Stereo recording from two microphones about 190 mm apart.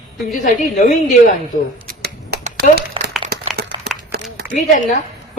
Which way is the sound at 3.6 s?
55° right (ahead or behind).